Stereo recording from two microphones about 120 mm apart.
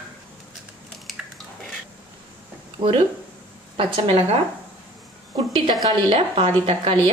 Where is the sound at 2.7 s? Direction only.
40° right (ahead or behind).